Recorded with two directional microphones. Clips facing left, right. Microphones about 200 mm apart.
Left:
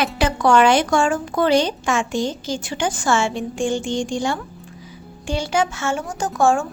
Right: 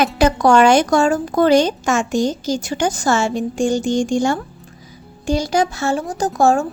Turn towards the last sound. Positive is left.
turn(degrees=-35)  # may be behind; listen again after turning